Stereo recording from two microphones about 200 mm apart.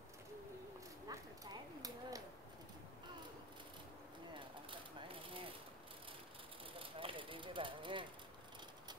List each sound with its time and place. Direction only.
1.0 s clip-clop: 20° right (ahead or behind)
4.3 s a sound: 25° right (ahead or behind)
6.8 s vehicle: 25° right (ahead or behind)